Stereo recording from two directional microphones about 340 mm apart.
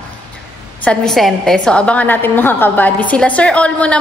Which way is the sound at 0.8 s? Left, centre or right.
Centre.